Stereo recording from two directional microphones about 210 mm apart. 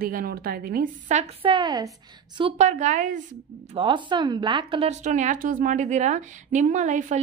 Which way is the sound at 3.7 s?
25° right (ahead or behind).